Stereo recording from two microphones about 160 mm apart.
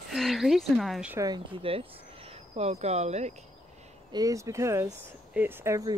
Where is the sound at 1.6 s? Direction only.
35° right (ahead or behind).